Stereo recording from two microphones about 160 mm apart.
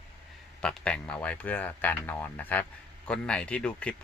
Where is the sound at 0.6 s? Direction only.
5° left (ahead or behind).